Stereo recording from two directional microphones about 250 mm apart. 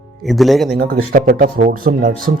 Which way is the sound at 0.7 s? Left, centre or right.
Right.